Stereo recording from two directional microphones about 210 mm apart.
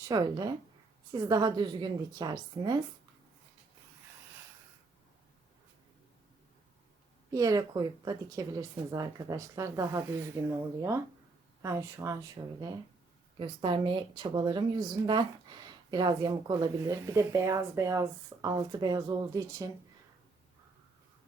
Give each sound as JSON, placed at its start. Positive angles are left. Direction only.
{"t": 0.1, "sound": "speech", "side_deg": -20}
{"t": 7.3, "sound": "speech", "side_deg": -15}